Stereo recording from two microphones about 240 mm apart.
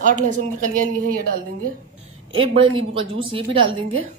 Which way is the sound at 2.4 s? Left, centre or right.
Right.